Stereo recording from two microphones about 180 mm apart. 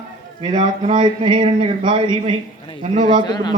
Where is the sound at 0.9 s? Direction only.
25° right (ahead or behind).